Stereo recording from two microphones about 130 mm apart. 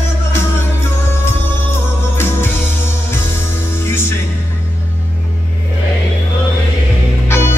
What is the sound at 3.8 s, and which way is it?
Music, 20° left (ahead or behind).